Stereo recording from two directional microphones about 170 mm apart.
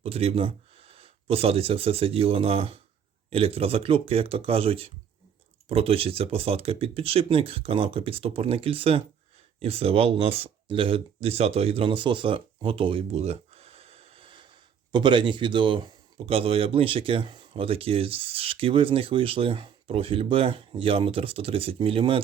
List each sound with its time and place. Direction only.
0.0 s speech: 35° right (ahead or behind)